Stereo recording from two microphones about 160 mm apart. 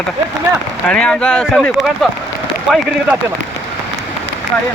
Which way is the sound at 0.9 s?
5° left (ahead or behind).